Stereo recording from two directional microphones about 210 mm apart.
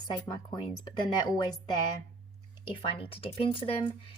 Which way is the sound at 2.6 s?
25° left (ahead or behind).